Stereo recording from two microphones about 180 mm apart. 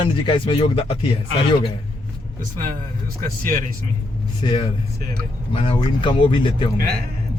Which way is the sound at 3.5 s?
50° right (ahead or behind).